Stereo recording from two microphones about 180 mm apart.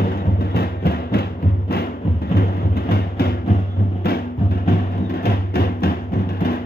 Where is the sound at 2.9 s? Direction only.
60° left (ahead or behind).